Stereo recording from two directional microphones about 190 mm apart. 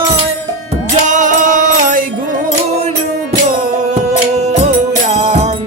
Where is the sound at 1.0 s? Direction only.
40° right (ahead or behind).